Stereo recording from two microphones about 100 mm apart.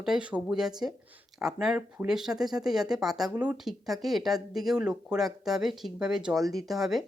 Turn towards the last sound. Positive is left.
turn(degrees=0)  # may be behind; listen again after turning